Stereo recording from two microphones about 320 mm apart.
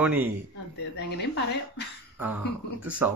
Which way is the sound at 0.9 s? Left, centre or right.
Left.